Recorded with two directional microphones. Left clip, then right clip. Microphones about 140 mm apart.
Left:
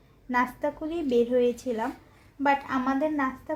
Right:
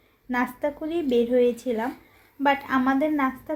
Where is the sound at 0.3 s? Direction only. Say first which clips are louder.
Even; centre (ahead or behind).